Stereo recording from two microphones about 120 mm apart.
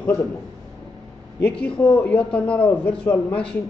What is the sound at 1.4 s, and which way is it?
A man's voice, 10° left (ahead or behind).